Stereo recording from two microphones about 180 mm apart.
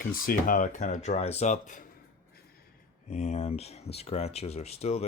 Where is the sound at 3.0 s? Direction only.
40° left (ahead or behind).